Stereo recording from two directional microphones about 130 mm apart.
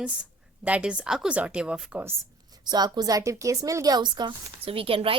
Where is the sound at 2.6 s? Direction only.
35° right (ahead or behind).